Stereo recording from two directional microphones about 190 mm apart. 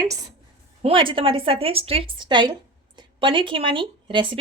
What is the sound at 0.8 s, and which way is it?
A woman's voice, 30° right (ahead or behind).